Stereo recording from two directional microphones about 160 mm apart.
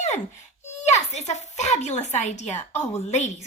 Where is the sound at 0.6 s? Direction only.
45° left (ahead or behind).